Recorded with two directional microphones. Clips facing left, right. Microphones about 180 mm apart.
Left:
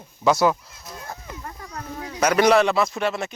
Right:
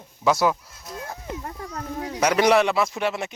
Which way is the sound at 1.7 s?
40° right (ahead or behind).